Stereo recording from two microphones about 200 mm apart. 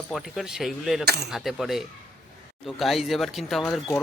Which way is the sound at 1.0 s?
55° right (ahead or behind).